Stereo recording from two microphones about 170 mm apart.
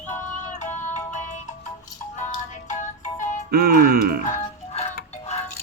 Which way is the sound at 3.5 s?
60° right (ahead or behind).